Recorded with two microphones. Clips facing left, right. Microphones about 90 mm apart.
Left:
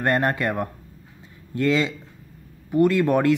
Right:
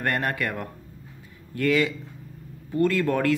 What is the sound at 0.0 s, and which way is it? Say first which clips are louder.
Speech: left 5 dB; 25° left (ahead or behind).